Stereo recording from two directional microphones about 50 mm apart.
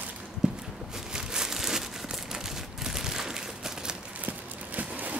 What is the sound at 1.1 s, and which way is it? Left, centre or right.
Crumpling, centre.